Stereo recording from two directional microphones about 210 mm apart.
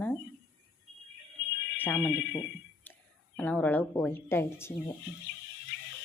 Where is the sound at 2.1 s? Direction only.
55° left (ahead or behind).